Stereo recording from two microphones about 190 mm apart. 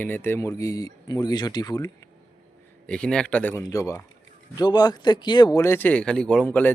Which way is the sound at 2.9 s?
5° left (ahead or behind).